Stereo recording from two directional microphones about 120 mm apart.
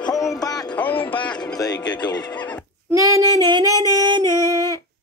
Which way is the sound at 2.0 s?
35° left (ahead or behind).